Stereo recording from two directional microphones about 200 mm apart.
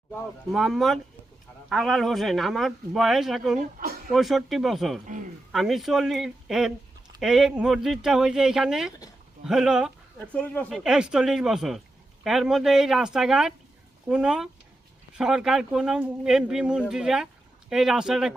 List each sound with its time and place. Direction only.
0.5 s speech: centre (ahead or behind)
3.6 s speech: 45° right (ahead or behind)
4.1 s speech: centre (ahead or behind)
10.2 s speech: 5° left (ahead or behind)
10.8 s speech: 5° right (ahead or behind)